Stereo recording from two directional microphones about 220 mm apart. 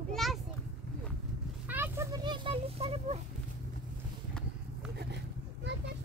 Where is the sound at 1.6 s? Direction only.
10° right (ahead or behind); by 3.2 s 25° right (ahead or behind).